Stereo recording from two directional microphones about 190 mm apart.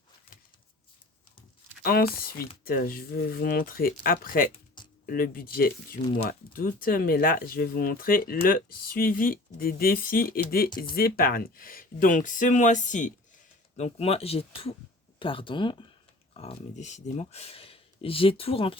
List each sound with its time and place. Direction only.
1.8 s speech: 50° left (ahead or behind); by 18.8 s 30° left (ahead or behind)